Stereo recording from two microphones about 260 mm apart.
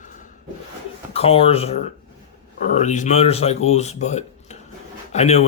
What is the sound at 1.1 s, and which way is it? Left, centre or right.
Speech, left.